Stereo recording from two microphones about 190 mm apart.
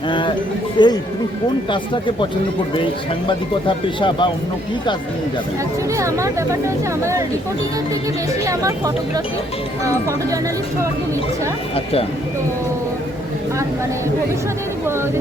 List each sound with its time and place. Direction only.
0.1 s speech: 25° left (ahead or behind)
3.2 s speech: 25° left (ahead or behind)
6.0 s speech: 15° right (ahead or behind)